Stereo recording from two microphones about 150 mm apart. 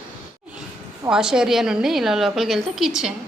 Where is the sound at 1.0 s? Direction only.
5° right (ahead or behind).